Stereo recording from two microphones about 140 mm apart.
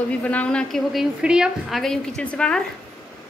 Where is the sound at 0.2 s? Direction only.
10° left (ahead or behind).